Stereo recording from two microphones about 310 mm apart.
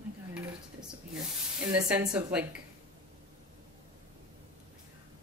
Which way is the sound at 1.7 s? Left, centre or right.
Centre.